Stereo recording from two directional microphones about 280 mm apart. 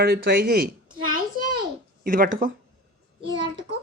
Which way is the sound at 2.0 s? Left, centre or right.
Right.